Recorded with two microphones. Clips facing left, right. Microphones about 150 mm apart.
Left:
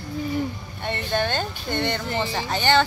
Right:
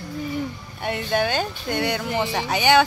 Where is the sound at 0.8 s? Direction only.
5° right (ahead or behind).